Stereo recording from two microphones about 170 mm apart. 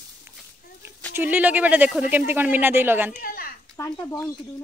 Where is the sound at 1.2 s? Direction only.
10° right (ahead or behind).